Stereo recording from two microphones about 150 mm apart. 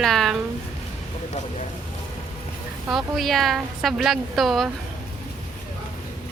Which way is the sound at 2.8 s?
Centre (ahead or behind).